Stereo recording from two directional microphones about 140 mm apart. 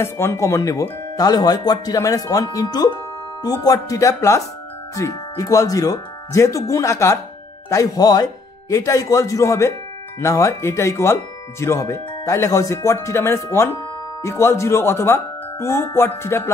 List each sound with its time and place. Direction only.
0.0 s speech: 20° left (ahead or behind)